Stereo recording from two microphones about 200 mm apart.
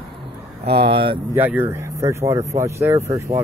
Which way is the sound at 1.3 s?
10° right (ahead or behind).